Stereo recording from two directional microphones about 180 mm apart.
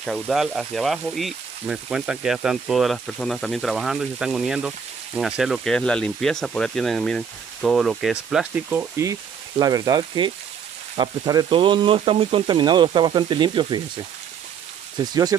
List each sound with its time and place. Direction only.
0.0 s speech: centre (ahead or behind); by 15.3 s 20° right (ahead or behind)